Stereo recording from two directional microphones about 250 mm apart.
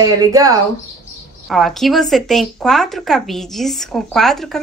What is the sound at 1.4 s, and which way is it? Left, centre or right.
Speech, centre.